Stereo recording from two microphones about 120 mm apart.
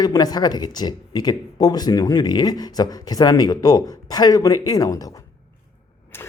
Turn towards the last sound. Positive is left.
turn(degrees=20)  # may be behind; listen again after turning